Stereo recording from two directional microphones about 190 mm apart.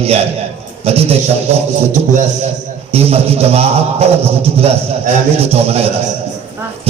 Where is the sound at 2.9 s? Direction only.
30° right (ahead or behind).